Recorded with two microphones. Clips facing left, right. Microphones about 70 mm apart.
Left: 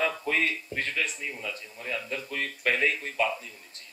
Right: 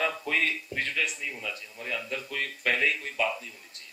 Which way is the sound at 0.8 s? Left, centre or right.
Left.